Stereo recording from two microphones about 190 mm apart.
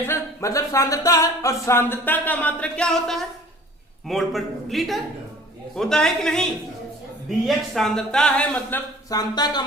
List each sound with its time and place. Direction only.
0.0 s speech: 15° left (ahead or behind)
9.0 s speech: 20° left (ahead or behind)